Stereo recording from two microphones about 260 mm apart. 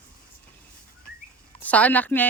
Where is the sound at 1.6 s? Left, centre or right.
Centre.